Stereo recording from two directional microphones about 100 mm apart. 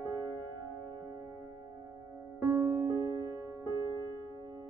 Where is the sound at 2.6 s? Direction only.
25° right (ahead or behind).